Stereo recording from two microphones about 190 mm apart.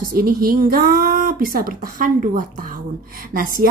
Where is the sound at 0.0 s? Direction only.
50° right (ahead or behind).